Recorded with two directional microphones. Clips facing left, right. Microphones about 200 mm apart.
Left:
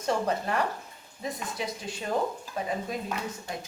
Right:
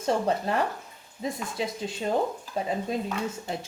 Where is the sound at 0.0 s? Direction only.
25° right (ahead or behind).